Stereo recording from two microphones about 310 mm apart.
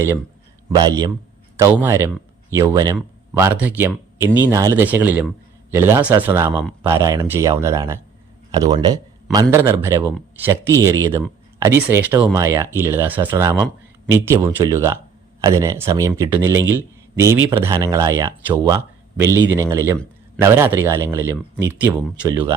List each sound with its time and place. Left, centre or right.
0.7 s a man's voice: centre